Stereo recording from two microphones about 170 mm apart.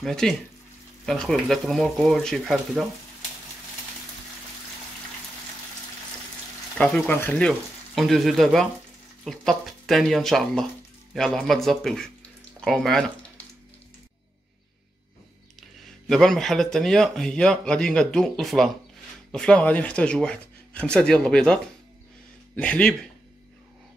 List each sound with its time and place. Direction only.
0.0 s speech: centre (ahead or behind)
6.8 s speech: 10° left (ahead or behind)
16.1 s speech: 5° left (ahead or behind)
22.6 s speech: 5° left (ahead or behind)